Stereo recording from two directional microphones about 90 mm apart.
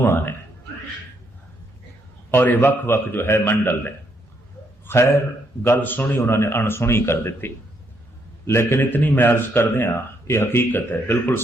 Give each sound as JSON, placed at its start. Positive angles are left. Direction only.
{"t": 0.0, "sound": "a man's voice", "side_deg": 25}
{"t": 2.3, "sound": "a man's voice", "side_deg": 20}
{"t": 4.9, "sound": "a man's voice", "side_deg": 30}